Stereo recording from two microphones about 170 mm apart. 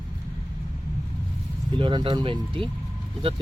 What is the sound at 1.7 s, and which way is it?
Speech, 30° right (ahead or behind).